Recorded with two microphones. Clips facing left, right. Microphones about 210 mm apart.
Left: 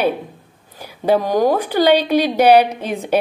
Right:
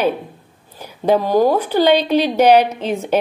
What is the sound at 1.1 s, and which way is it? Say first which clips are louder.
Speech: right 1 dB; 45° left (ahead or behind).